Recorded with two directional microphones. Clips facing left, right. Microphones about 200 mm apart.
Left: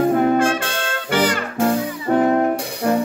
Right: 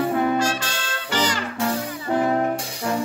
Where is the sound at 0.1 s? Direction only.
45° left (ahead or behind).